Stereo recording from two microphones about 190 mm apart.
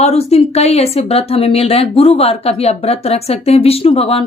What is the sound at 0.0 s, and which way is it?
Speech, 35° left (ahead or behind).